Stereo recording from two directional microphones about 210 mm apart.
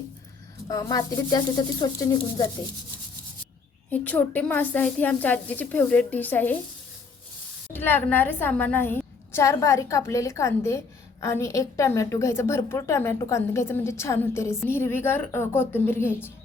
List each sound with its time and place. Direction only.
0.7 s a woman's voice: 15° left (ahead or behind)
3.9 s a woman's voice: 5° left (ahead or behind)
7.7 s a woman's voice: 10° left (ahead or behind)